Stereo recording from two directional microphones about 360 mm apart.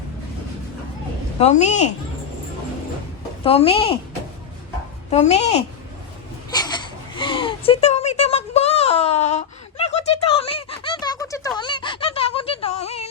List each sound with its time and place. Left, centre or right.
1.4 s a woman's voice: centre
3.4 s a woman's voice: centre
5.1 s a woman's voice: centre
6.5 s a sound: centre